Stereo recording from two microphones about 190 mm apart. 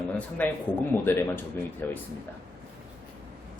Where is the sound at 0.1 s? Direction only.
10° left (ahead or behind).